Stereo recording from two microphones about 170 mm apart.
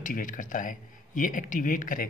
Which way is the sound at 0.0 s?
50° left (ahead or behind).